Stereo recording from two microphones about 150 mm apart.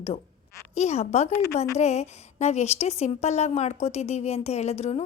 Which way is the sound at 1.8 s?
45° left (ahead or behind).